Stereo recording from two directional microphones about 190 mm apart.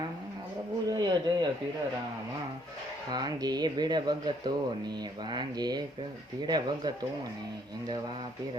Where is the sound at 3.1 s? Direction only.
20° right (ahead or behind).